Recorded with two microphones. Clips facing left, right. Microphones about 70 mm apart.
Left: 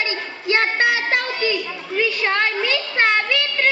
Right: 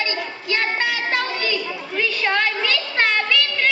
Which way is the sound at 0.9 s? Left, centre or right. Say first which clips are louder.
Left 2 dB; left.